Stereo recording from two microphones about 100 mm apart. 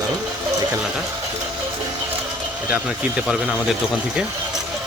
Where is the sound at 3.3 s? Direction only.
10° right (ahead or behind).